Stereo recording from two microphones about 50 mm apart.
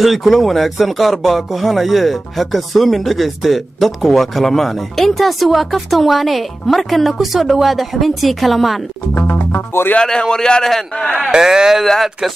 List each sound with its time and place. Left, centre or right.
0.0 s speech: centre
9.3 s speech: left
10.0 s a man's voice: centre
11.3 s speech: centre
11.8 s speech: centre